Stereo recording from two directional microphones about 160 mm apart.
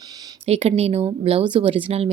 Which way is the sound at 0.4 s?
40° right (ahead or behind).